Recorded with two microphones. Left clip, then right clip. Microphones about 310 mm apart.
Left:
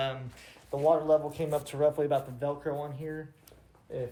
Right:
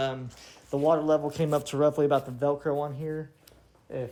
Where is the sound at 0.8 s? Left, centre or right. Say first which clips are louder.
Right 1 dB; right.